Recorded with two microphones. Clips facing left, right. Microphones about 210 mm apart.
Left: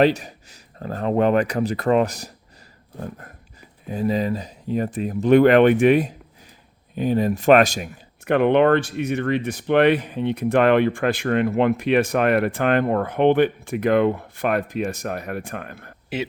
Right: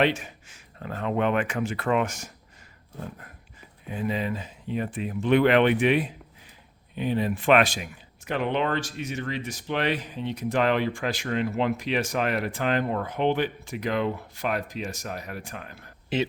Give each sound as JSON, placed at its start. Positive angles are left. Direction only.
{"t": 0.0, "sound": "speech", "side_deg": 40}
{"t": 3.8, "sound": "speech", "side_deg": 40}
{"t": 8.2, "sound": "speech", "side_deg": 60}
{"t": 16.1, "sound": "speech", "side_deg": 10}